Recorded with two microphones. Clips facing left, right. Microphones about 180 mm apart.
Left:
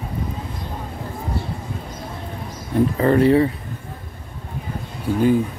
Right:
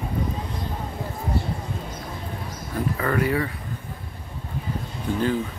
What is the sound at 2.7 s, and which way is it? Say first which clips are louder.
Speech: left 8 dB; 30° left (ahead or behind).